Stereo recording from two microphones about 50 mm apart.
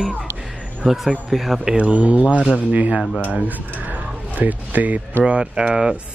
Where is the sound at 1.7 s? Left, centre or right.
Right.